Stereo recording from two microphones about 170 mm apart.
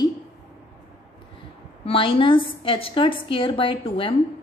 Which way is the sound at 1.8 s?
30° left (ahead or behind).